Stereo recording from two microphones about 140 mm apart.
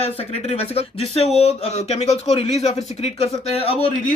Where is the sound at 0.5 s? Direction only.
50° left (ahead or behind).